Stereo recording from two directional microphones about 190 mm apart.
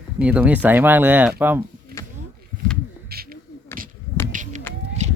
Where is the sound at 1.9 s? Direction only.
55° right (ahead or behind).